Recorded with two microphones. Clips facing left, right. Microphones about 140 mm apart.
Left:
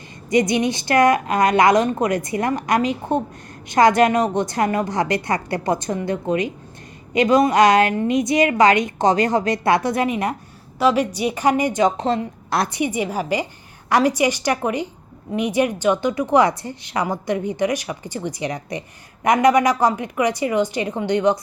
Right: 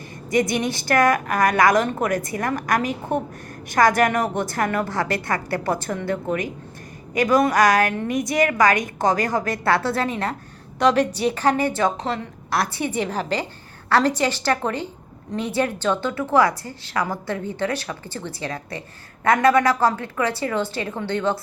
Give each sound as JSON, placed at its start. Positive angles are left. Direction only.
{"t": 0.3, "sound": "a woman's voice", "side_deg": 20}